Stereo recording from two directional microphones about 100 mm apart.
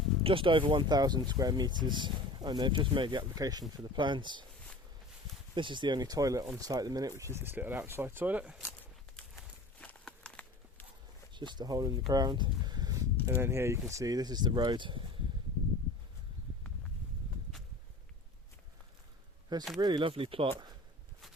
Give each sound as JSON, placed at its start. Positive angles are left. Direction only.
{"t": 0.2, "sound": "speech", "side_deg": -65}
{"t": 3.3, "sound": "speech", "side_deg": -40}
{"t": 3.9, "sound": "speech", "side_deg": -50}
{"t": 5.5, "sound": "speech", "side_deg": -55}
{"t": 9.8, "sound": "a sound", "side_deg": 10}
{"t": 11.3, "sound": "speech", "side_deg": -50}
{"t": 12.0, "sound": "a sound", "side_deg": -45}
{"t": 13.2, "sound": "speech", "side_deg": -30}
{"t": 19.5, "sound": "speech", "side_deg": -45}
{"t": 20.0, "sound": "speech", "side_deg": -65}